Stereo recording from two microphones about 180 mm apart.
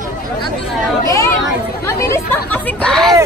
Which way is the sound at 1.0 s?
15° left (ahead or behind).